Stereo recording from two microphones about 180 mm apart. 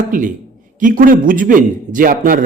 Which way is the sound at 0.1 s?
50° right (ahead or behind).